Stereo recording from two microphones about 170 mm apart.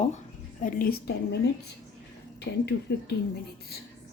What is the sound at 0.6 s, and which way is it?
Speech, 55° left (ahead or behind).